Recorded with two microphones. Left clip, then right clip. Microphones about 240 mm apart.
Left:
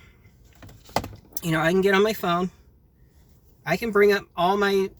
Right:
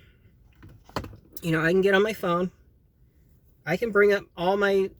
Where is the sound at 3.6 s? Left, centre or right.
Centre.